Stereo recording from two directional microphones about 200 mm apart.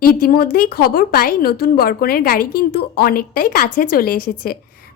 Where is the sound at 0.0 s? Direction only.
45° left (ahead or behind).